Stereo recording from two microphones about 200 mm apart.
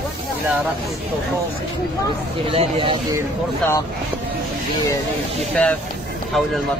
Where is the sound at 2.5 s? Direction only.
25° right (ahead or behind).